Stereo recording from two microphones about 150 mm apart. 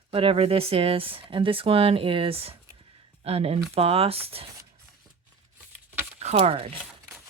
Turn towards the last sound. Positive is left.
turn(degrees=-40)  # may be behind; listen again after turning